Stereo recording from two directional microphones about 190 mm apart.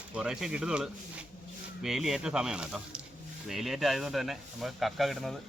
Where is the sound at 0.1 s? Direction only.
5° right (ahead or behind).